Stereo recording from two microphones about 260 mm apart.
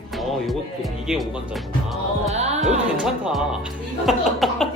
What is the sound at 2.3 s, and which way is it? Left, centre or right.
Speech, right.